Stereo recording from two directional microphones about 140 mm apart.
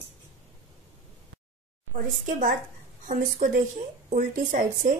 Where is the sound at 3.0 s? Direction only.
65° right (ahead or behind).